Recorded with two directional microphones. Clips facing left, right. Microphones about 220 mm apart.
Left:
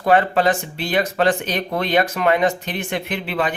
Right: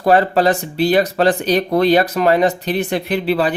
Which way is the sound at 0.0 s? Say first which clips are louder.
Right 3 dB; 35° right (ahead or behind).